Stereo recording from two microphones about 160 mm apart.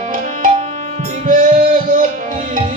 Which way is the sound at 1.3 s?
55° right (ahead or behind).